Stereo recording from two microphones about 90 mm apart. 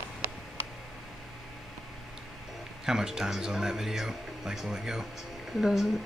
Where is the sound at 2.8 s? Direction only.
5° right (ahead or behind).